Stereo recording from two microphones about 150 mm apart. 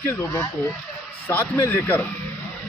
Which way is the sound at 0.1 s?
15° left (ahead or behind).